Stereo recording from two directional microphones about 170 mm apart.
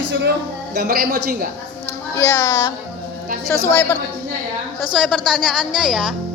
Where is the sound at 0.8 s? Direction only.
60° right (ahead or behind).